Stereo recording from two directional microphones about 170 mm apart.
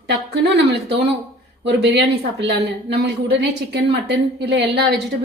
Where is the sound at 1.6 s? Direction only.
85° right.